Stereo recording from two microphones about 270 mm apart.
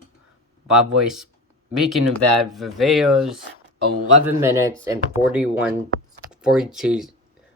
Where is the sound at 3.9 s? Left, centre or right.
Right.